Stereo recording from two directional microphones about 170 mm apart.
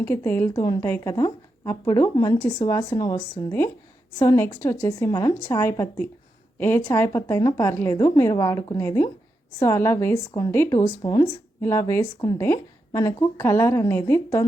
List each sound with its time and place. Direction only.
0.0 s a woman's voice: 15° left (ahead or behind)
0.5 s a woman's voice: 25° left (ahead or behind)